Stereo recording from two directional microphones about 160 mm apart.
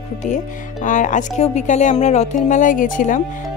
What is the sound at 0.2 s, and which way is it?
A woman's voice, 55° left (ahead or behind).